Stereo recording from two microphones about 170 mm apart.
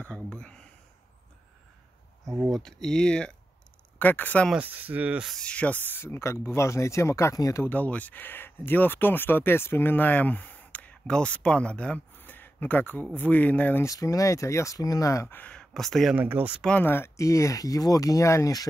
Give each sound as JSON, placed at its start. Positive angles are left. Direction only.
{"t": 0.0, "sound": "a sound", "side_deg": 5}
{"t": 2.2, "sound": "a sound", "side_deg": -15}
{"t": 2.5, "sound": "speech", "side_deg": 5}
{"t": 4.6, "sound": "speech", "side_deg": -10}
{"t": 16.2, "sound": "speech", "side_deg": -10}
{"t": 16.6, "sound": "speech", "side_deg": 10}